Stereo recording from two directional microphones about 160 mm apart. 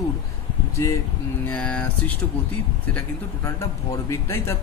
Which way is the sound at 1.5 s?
5° left (ahead or behind).